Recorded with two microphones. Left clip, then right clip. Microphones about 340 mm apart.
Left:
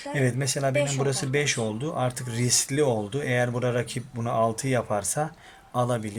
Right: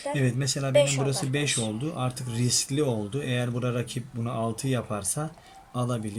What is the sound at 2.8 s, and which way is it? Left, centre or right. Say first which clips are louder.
Speech: left 4 dB; left.